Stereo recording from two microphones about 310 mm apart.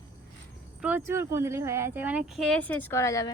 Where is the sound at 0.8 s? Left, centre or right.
Centre.